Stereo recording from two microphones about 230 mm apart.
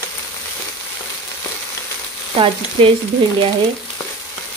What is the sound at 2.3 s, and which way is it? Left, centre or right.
Frying, right.